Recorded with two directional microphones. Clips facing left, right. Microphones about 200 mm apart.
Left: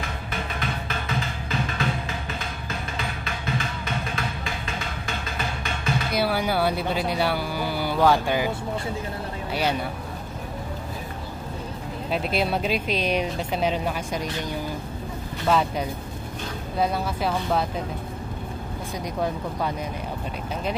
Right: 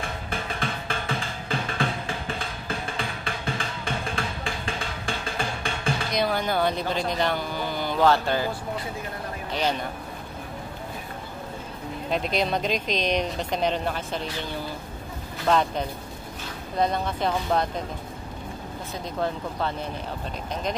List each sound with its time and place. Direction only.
0.0 s music: 30° right (ahead or behind)
6.1 s speech: 10° left (ahead or behind)
9.5 s speech: 10° left (ahead or behind)
12.1 s speech: 5° left (ahead or behind)
15.4 s speech: 5° left (ahead or behind)